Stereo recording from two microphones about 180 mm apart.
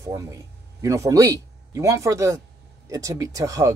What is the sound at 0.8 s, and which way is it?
Speech, 20° right (ahead or behind).